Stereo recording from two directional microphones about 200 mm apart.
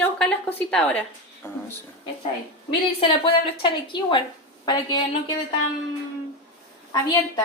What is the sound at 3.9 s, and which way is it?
A woman's voice, 25° left (ahead or behind).